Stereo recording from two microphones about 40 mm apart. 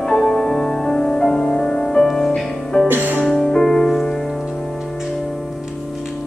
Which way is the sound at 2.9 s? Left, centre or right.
Right.